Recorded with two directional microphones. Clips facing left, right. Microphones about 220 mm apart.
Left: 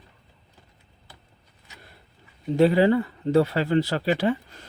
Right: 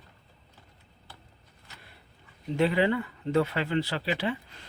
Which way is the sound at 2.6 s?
40° left (ahead or behind).